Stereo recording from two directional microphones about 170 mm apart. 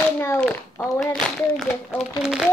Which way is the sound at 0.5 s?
10° left (ahead or behind).